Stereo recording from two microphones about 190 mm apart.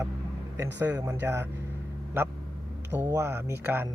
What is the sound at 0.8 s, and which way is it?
Speech, 15° right (ahead or behind).